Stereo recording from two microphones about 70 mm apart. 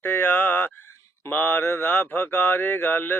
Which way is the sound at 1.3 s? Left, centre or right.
Left.